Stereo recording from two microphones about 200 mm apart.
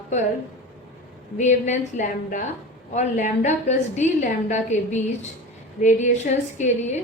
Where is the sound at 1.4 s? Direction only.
35° left (ahead or behind).